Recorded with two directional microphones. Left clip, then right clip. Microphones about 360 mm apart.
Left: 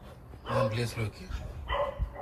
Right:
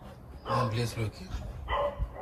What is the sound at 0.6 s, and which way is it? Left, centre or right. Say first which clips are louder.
Speech: left 2 dB; centre.